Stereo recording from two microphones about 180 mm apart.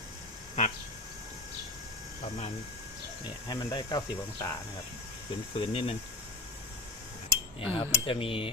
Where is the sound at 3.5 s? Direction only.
25° left (ahead or behind).